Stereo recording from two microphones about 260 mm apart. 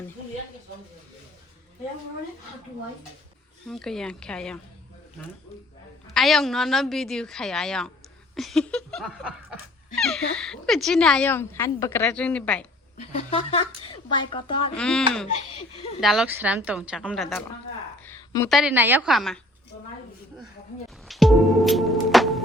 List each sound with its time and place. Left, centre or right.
3.7 s speech: centre
6.1 s speech: centre
13.0 s a woman's voice: left
14.8 s speech: centre
18.0 s a sound: centre
18.4 s speech: centre
21.1 s music: centre